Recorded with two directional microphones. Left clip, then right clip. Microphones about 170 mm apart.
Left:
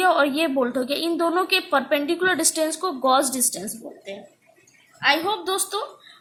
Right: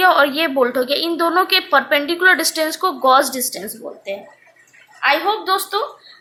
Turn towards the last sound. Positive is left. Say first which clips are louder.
# right 7 dB
turn(degrees=15)  # may be behind; listen again after turning